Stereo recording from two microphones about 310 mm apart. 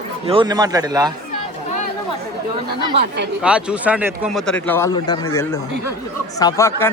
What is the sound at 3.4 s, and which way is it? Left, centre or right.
Speech, centre.